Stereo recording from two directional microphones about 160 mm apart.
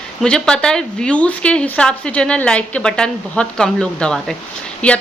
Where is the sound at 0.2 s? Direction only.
5° left (ahead or behind).